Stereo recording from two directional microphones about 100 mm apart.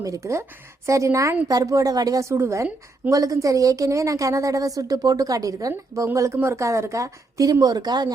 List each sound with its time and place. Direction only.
0.0 s a woman's voice: 30° right (ahead or behind)